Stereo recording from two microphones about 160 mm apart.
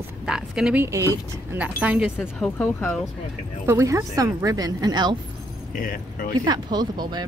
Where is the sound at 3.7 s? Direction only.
15° right (ahead or behind).